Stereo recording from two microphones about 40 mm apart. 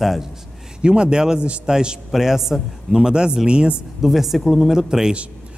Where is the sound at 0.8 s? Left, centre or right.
Right.